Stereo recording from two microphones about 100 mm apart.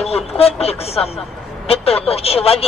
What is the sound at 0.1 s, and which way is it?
Speech, 90° left.